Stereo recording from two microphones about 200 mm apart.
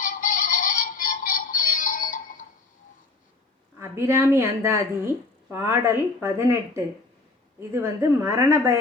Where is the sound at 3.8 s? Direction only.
15° right (ahead or behind).